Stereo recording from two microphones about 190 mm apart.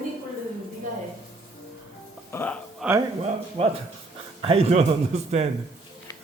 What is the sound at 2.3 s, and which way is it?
Music, 10° left (ahead or behind).